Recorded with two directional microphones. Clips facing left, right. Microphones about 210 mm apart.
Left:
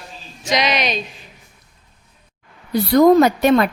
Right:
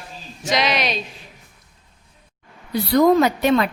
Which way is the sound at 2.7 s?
45° left (ahead or behind).